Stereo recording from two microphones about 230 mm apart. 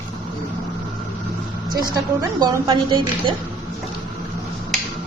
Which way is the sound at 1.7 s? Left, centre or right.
Centre.